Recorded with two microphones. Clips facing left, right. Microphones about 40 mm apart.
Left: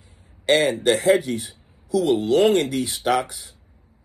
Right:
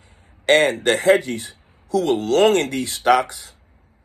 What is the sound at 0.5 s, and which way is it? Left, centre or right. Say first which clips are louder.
Speech: right 2 dB; right.